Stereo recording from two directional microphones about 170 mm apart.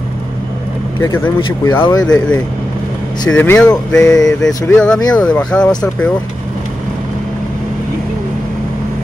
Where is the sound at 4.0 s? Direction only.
20° left (ahead or behind).